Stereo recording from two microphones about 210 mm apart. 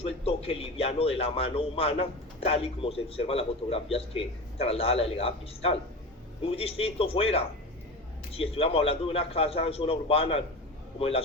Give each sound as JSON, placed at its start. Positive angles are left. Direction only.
{"t": 0.0, "sound": "a man's voice", "side_deg": 25}